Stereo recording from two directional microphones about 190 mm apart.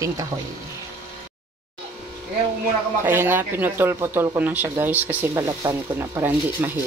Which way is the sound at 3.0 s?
10° right (ahead or behind).